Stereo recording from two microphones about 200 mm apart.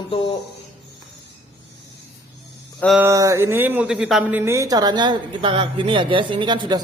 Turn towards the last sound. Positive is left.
turn(degrees=-25)  # may be behind; listen again after turning